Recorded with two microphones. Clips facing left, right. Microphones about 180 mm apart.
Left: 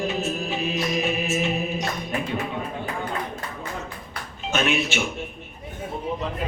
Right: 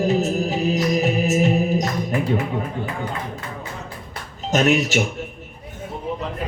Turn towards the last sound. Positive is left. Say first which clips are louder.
# right 6 dB
turn(degrees=-40)  # may be behind; listen again after turning